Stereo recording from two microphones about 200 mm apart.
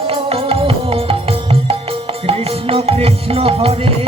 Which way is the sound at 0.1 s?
30° right (ahead or behind).